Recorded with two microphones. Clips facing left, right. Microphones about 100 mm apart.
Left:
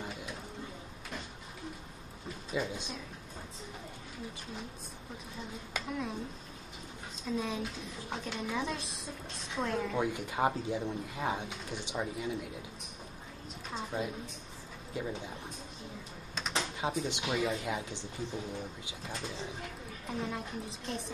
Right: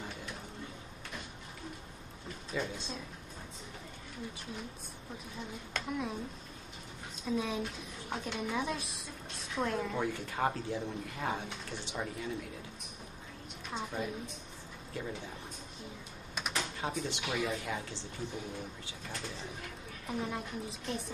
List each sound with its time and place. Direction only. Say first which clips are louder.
2.5 s speech: left 2 dB; 15° left (ahead or behind)
5.9 s a woman's voice: right 1 dB; centre (ahead or behind)
7.2 s a woman's voice: right 1 dB; centre (ahead or behind)
9.9 s speech: left 2 dB; 15° left (ahead or behind)
13.9 s speech: left 1 dB; 10° left (ahead or behind)
16.5 s speech: left 3 dB; 20° left (ahead or behind)
20.1 s a woman's voice: even; centre (ahead or behind)